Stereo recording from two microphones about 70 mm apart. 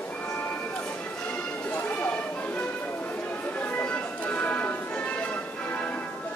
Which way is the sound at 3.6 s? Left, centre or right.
Left.